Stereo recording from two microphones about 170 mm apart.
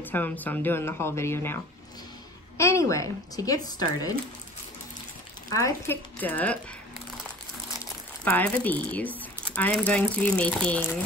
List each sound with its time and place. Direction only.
0.0 s speech: 10° left (ahead or behind)
5.5 s speech: 15° left (ahead or behind)
8.2 s speech: 10° left (ahead or behind)